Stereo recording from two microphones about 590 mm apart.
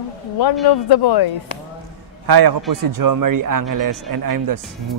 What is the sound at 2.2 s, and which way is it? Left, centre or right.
Speech, right.